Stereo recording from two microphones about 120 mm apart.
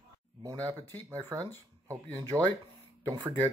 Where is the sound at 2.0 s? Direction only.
15° left (ahead or behind).